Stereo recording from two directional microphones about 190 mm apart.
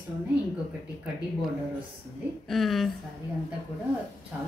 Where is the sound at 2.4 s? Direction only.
Centre (ahead or behind).